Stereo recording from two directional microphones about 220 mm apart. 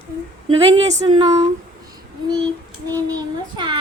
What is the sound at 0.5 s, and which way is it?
Speech, 25° right (ahead or behind).